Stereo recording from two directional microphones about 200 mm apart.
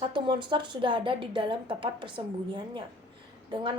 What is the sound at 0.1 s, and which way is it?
A woman's voice, 25° right (ahead or behind).